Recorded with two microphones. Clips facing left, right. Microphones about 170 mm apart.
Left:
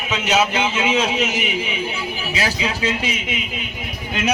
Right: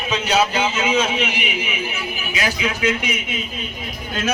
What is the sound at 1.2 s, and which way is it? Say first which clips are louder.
A man's voice: left 2 dB; 40° left (ahead or behind).